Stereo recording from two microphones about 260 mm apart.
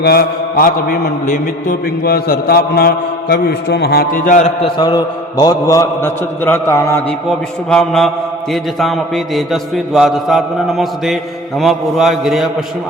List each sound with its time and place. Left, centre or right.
0.0 s a man's voice: left; by 12.6 s centre